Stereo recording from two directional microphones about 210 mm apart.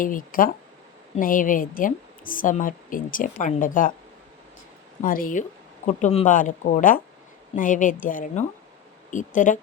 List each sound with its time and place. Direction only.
0.0 s a woman's voice: 40° left (ahead or behind)
5.0 s a woman's voice: 40° left (ahead or behind)